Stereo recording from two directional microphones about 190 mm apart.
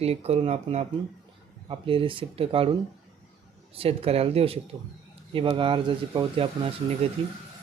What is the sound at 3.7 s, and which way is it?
Speech, 30° right (ahead or behind).